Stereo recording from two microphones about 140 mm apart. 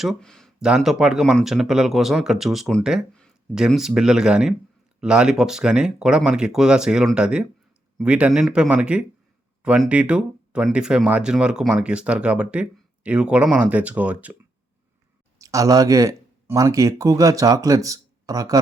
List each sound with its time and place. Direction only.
0.0 s speech: centre (ahead or behind)
15.4 s speech: 25° right (ahead or behind)